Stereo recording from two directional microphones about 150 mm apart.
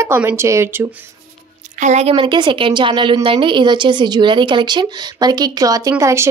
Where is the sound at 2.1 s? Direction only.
35° right (ahead or behind).